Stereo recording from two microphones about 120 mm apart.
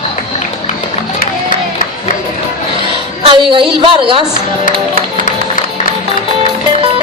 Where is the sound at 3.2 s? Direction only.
45° right (ahead or behind).